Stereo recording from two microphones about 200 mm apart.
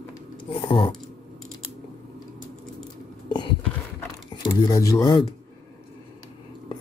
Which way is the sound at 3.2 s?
20° left (ahead or behind).